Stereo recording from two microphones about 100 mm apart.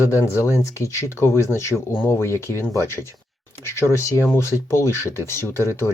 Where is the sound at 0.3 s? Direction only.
30° left (ahead or behind).